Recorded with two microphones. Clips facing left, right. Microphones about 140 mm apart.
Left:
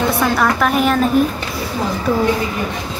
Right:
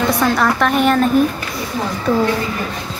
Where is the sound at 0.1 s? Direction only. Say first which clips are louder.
Even; 10° left (ahead or behind).